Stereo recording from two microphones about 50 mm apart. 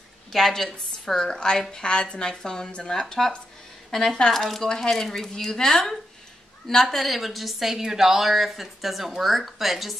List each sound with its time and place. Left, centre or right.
0.3 s a woman's voice: centre